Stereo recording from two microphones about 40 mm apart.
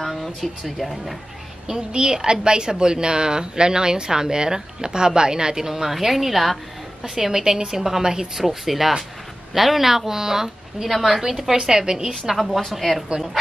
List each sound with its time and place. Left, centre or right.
0.0 s speech: centre
1.9 s a woman's voice: centre
12.5 s speech: centre